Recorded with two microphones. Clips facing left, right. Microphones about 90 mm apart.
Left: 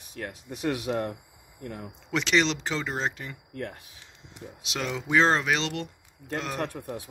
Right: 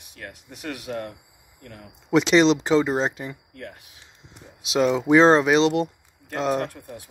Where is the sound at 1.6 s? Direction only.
25° left (ahead or behind).